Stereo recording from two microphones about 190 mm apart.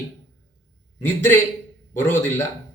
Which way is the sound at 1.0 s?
10° left (ahead or behind).